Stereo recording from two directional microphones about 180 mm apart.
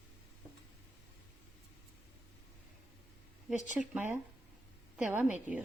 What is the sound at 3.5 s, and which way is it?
Speech, 40° left (ahead or behind).